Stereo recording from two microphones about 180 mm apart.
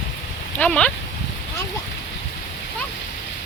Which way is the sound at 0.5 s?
5° left (ahead or behind).